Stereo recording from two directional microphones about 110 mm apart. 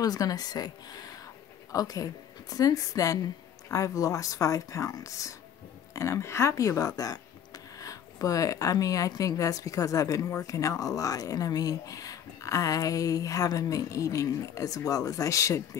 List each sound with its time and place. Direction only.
0.0 s speech: 35° left (ahead or behind)